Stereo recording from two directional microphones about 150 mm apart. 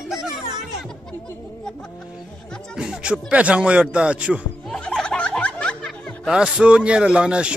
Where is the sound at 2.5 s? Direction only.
5° right (ahead or behind).